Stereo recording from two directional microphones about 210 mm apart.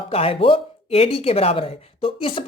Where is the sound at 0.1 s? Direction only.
25° left (ahead or behind).